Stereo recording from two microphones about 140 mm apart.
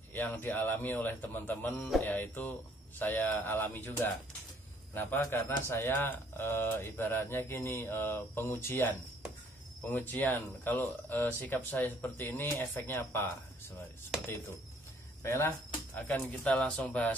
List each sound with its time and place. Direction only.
0.1 s a man's voice: 15° left (ahead or behind)
15.2 s a man's voice: 15° left (ahead or behind)